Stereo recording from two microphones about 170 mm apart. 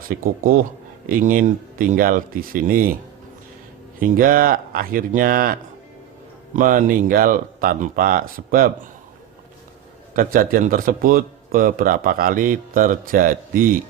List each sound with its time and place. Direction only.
0.0 s a man's voice: 55° right (ahead or behind)
4.0 s a man's voice: 55° right (ahead or behind)
10.2 s a man's voice: 55° right (ahead or behind)